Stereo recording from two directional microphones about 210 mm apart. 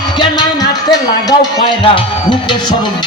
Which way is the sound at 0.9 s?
20° left (ahead or behind).